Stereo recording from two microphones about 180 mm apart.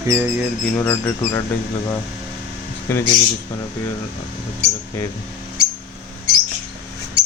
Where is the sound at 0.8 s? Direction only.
10° left (ahead or behind).